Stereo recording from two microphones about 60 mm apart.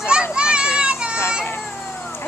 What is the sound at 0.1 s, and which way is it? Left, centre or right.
Children playing, centre.